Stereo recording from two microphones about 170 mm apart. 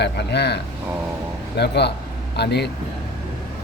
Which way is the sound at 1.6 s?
80° left.